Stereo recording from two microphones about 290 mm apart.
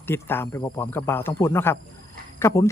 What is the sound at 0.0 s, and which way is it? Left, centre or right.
Speech, centre.